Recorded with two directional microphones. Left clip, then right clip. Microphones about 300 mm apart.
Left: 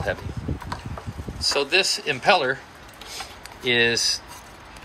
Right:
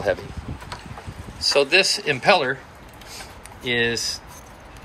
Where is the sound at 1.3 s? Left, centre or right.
Centre.